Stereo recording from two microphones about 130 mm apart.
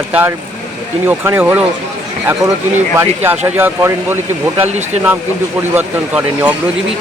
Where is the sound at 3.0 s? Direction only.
15° right (ahead or behind).